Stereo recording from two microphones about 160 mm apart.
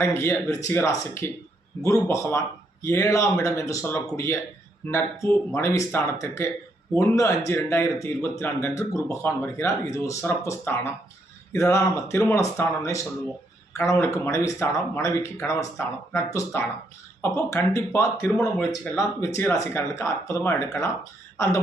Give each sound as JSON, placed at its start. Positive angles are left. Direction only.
{"t": 0.0, "sound": "speech", "side_deg": 15}
{"t": 18.2, "sound": "speech", "side_deg": 5}
{"t": 18.9, "sound": "speech", "side_deg": 20}